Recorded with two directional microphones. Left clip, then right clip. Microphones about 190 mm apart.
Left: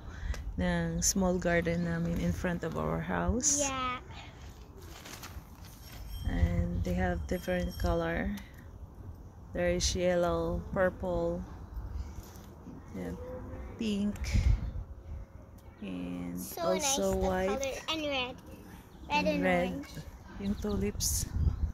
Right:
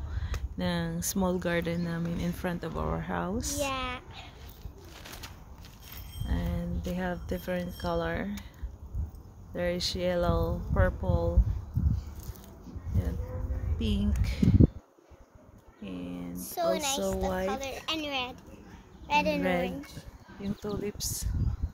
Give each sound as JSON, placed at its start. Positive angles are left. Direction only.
{"t": 0.6, "sound": "speech", "side_deg": 0}
{"t": 3.5, "sound": "a sound", "side_deg": -15}
{"t": 4.9, "sound": "bird", "side_deg": -15}
{"t": 6.2, "sound": "speech", "side_deg": 0}
{"t": 9.5, "sound": "speech", "side_deg": 0}
{"t": 13.7, "sound": "speech", "side_deg": 0}
{"t": 15.8, "sound": "a sound", "side_deg": 0}
{"t": 16.3, "sound": "a woman's voice", "side_deg": -60}
{"t": 19.0, "sound": "a woman's voice", "side_deg": -35}
{"t": 19.4, "sound": "speech", "side_deg": 0}